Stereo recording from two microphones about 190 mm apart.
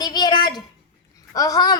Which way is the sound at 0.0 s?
20° left (ahead or behind).